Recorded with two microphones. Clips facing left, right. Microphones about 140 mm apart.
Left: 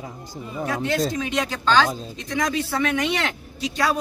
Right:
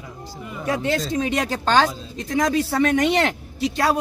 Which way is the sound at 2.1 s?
50° right (ahead or behind).